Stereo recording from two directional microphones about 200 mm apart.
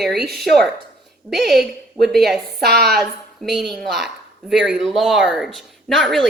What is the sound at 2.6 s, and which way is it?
Speech, 50° right (ahead or behind).